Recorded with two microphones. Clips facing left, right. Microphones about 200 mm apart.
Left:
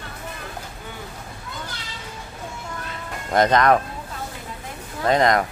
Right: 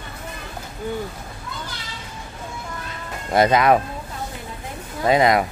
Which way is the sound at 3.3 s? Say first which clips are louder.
Right 1 dB; 10° right (ahead or behind).